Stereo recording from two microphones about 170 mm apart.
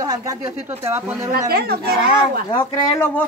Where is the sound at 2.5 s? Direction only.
15° left (ahead or behind).